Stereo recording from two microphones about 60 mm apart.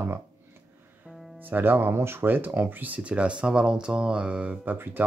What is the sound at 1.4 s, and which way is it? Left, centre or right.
Speech, right.